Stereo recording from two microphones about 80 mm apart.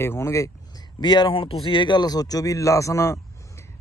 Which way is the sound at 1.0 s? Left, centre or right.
Left.